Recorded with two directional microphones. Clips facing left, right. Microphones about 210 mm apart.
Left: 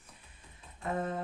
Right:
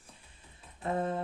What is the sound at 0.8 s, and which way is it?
Speech, 30° right (ahead or behind).